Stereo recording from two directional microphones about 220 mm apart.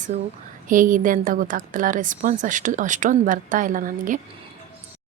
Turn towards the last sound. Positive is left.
turn(degrees=-35)  # may be behind; listen again after turning